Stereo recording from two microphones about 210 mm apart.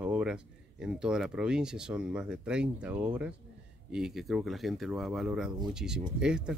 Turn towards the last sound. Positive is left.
turn(degrees=-5)  # may be behind; listen again after turning